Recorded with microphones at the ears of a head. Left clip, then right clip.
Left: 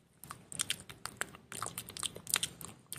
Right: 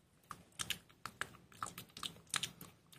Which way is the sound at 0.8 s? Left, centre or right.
Left.